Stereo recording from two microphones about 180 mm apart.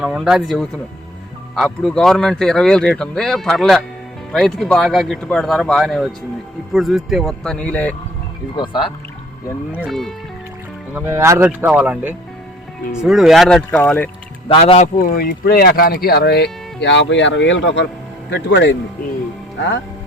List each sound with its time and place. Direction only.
0.0 s speech: 5° right (ahead or behind)
8.5 s speech: 25° left (ahead or behind)
9.7 s speech: 5° right (ahead or behind)
10.9 s speech: 15° right (ahead or behind); by 14.1 s 10° left (ahead or behind)
14.4 s speech: 30° left (ahead or behind)
15.1 s speech: 55° left (ahead or behind); by 18.8 s 80° left